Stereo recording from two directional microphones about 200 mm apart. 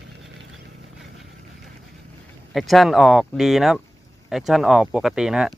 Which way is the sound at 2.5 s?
Centre (ahead or behind).